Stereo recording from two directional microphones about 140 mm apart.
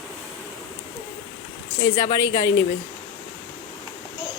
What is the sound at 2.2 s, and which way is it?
Speech, 25° left (ahead or behind).